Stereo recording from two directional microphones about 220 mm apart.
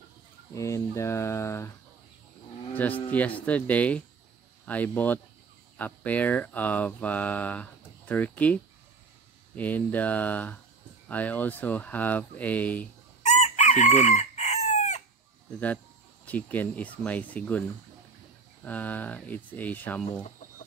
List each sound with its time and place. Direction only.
0.6 s speech: 15° left (ahead or behind)
2.7 s speech: 5° left (ahead or behind)
9.6 s speech: 5° left (ahead or behind)
13.2 s chicken: 30° left (ahead or behind)
16.3 s speech: 5° left (ahead or behind)